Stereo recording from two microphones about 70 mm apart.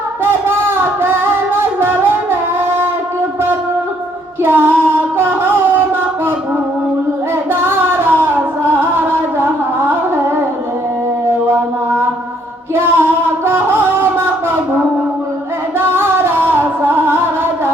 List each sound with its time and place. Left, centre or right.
0.4 s a sound: right
1.8 s music: right
4.4 s a sound: right
7.5 s music: right
11.3 s mantra: right
12.7 s music: right
15.8 s music: right